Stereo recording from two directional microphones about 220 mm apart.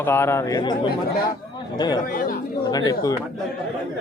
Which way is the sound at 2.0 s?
40° left (ahead or behind).